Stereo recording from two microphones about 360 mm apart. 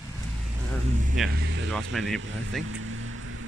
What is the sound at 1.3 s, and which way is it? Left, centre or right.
Speech, right.